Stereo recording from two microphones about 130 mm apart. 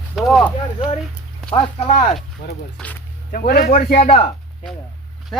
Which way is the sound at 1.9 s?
70° left (ahead or behind).